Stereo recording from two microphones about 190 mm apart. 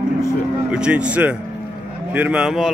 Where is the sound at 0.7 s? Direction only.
5° right (ahead or behind).